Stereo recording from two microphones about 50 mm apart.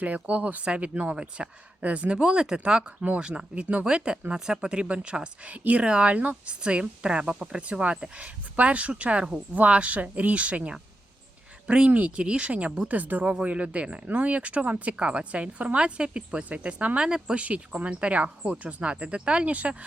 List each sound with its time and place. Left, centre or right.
0.0 s speech: right
6.1 s speech: right
11.9 s speech: right
12.1 s speech: centre
17.1 s speech: centre
17.3 s speech: right